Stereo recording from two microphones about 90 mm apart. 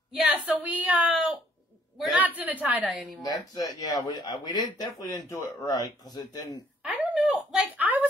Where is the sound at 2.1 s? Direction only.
20° right (ahead or behind).